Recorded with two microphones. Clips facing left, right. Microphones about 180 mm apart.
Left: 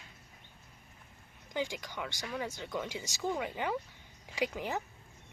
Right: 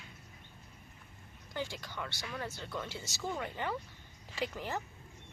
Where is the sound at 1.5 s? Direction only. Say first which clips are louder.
Left 4 dB; 15° left (ahead or behind).